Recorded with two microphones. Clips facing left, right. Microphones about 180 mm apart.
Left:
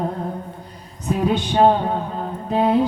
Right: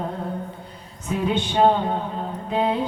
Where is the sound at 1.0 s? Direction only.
40° left (ahead or behind).